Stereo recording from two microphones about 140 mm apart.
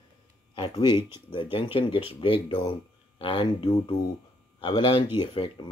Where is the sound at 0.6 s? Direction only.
35° left (ahead or behind).